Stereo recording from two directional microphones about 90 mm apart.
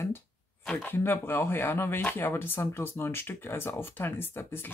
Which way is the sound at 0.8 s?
25° left (ahead or behind).